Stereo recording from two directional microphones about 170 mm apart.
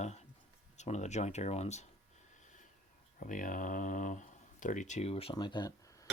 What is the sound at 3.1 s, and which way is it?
Speech, 50° left (ahead or behind).